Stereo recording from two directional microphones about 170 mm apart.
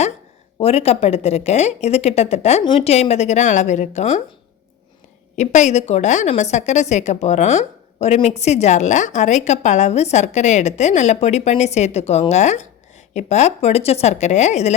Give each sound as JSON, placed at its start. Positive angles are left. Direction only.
{"t": 0.6, "sound": "a woman's voice", "side_deg": 35}
{"t": 5.4, "sound": "a woman's voice", "side_deg": 45}